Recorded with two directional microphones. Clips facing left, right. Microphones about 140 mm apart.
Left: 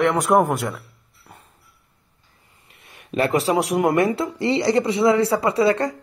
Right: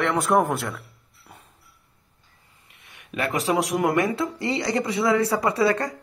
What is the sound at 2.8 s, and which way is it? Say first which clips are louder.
Speech: left 6 dB; 35° left (ahead or behind).